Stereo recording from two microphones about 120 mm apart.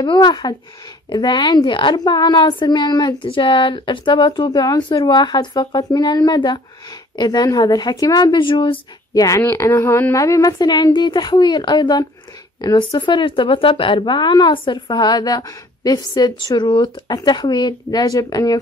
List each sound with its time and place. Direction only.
0.0 s speech: 40° left (ahead or behind)